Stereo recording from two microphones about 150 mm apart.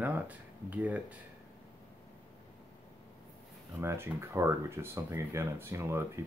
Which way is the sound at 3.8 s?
20° right (ahead or behind).